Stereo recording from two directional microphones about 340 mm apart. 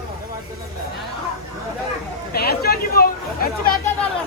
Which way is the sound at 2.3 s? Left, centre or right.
Left.